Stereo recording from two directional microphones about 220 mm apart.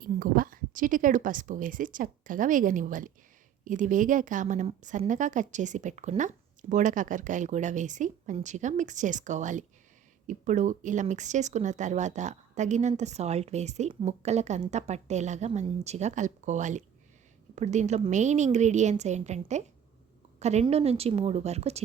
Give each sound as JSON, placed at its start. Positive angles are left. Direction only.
{"t": 0.0, "sound": "a woman's voice", "side_deg": -40}